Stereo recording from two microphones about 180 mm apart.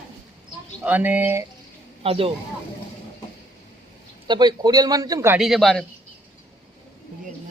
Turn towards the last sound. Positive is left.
turn(degrees=0)  # may be behind; listen again after turning